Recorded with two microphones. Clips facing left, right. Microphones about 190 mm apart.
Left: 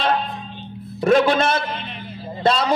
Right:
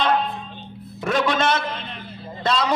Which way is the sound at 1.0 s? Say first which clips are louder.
Left 5 dB; 30° left (ahead or behind).